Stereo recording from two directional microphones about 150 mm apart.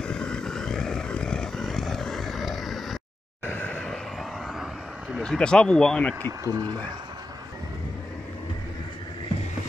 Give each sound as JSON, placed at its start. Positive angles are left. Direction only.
{"t": 0.0, "sound": "vehicle", "side_deg": 5}
{"t": 5.2, "sound": "speech", "side_deg": 5}
{"t": 6.2, "sound": "speech", "side_deg": -25}